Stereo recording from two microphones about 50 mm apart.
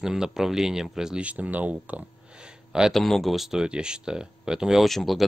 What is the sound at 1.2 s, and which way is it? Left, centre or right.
Speech, right.